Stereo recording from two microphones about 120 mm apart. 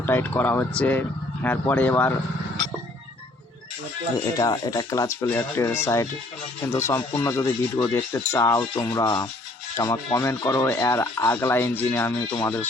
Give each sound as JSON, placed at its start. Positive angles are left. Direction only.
{"t": 0.0, "sound": "speech", "side_deg": 15}
{"t": 4.4, "sound": "speech", "side_deg": 30}